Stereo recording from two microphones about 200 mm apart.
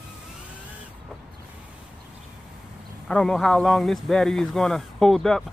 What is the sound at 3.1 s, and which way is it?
Speech, centre (ahead or behind).